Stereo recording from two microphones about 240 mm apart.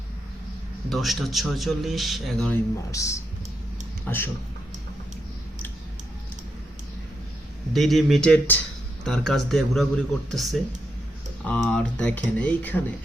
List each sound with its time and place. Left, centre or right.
0.9 s a man's voice: centre
2.9 s speech: centre
7.7 s a man's voice: centre